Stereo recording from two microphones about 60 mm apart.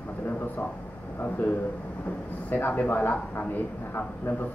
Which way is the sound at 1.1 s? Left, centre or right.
Left.